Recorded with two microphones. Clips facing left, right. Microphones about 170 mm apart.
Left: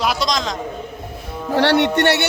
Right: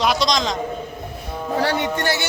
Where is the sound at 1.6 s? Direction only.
75° left (ahead or behind).